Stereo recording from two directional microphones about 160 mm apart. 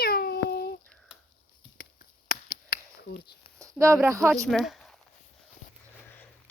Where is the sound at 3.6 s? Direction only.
20° right (ahead or behind).